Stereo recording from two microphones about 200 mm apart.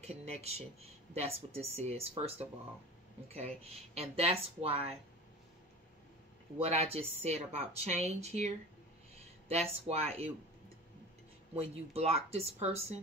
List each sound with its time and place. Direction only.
0.0 s speech: 30° right (ahead or behind)
6.6 s speech: 30° right (ahead or behind)
9.5 s speech: 30° right (ahead or behind)
11.5 s speech: 30° right (ahead or behind)